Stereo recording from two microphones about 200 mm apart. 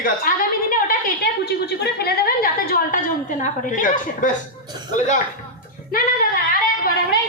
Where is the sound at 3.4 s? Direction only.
40° left (ahead or behind).